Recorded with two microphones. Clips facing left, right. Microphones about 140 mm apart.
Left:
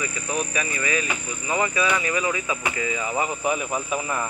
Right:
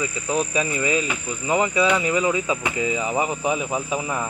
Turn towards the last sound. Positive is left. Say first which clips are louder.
# right 2 dB
turn(degrees=-5)  # may be behind; listen again after turning